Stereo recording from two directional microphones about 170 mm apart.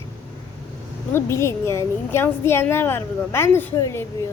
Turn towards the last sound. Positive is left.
turn(degrees=15)  # may be behind; listen again after turning